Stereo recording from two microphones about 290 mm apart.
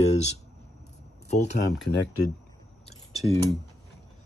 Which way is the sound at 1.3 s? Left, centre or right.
Left.